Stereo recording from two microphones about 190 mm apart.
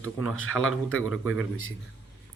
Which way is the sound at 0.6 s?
90° left.